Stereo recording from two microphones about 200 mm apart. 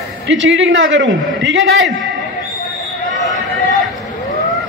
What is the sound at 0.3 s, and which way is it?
A man's voice, 65° right (ahead or behind).